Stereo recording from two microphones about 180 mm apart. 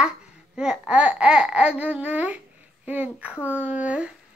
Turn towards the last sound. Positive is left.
turn(degrees=-5)  # may be behind; listen again after turning